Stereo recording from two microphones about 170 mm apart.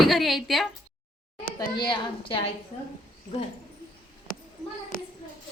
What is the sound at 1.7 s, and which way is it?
Speech, 25° left (ahead or behind).